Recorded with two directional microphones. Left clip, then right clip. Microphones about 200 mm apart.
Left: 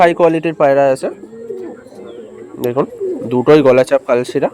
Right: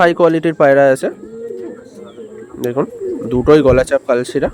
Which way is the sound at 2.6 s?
10° right (ahead or behind).